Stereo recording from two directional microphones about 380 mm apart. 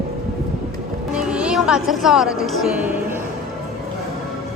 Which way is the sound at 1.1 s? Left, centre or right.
Centre.